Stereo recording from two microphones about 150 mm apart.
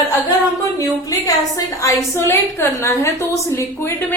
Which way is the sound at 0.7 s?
20° left (ahead or behind).